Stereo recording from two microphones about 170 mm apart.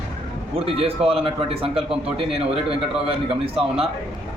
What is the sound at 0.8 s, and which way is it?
Speech, 35° right (ahead or behind).